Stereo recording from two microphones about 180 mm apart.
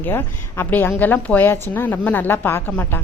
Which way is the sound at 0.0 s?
10° left (ahead or behind).